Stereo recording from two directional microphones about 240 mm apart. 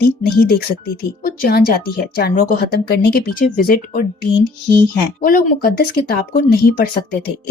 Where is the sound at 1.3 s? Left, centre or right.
Left.